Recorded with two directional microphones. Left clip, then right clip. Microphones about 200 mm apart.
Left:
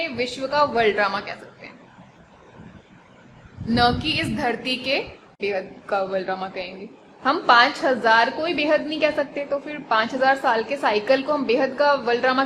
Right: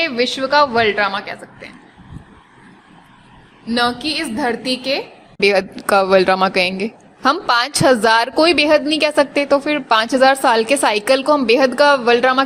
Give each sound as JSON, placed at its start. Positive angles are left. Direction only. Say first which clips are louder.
{"t": 0.0, "sound": "a woman's voice", "louder": "right 8 dB", "side_deg": -25}
{"t": 3.8, "sound": "a woman's voice", "louder": "right 2 dB", "side_deg": -30}
{"t": 5.4, "sound": "a woman's voice", "louder": "right 11 dB", "side_deg": -45}